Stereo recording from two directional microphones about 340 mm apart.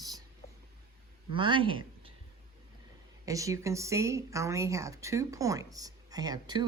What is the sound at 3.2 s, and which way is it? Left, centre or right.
Speech, centre.